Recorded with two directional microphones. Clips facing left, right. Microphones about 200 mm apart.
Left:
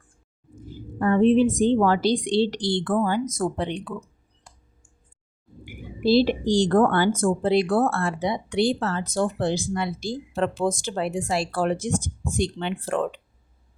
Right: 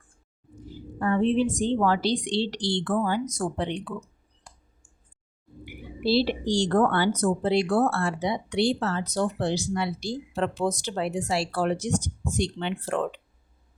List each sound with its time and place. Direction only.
0.6 s a woman's voice: 50° left (ahead or behind)
3.2 s speech: 90° left
5.6 s a woman's voice: 45° left (ahead or behind)